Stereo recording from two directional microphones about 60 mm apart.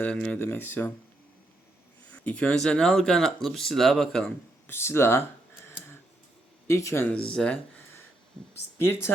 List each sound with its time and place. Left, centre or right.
0.0 s speech: left
0.3 s speech: left
2.0 s a sound: left
2.6 s speech: centre
4.6 s speech: left
6.7 s speech: left
7.1 s speech: centre